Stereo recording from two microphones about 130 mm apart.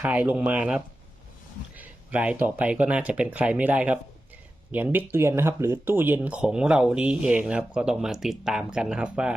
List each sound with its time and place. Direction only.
0.0 s speech: 10° right (ahead or behind)